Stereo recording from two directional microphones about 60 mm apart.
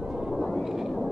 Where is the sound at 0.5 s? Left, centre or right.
Centre.